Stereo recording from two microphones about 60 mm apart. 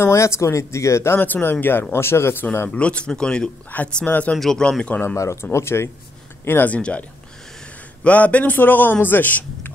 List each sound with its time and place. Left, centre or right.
0.0 s speech: left
1.1 s speech: left
2.7 s a man's voice: centre
3.7 s a man's voice: left
4.4 s speech: centre
4.6 s a man's voice: centre
5.1 s speech: left
5.4 s speech: left
6.7 s a man's voice: left